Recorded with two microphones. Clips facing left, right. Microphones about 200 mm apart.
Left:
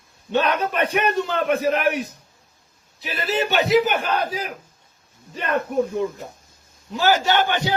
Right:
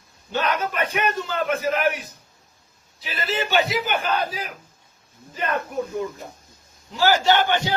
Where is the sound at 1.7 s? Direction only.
Centre (ahead or behind).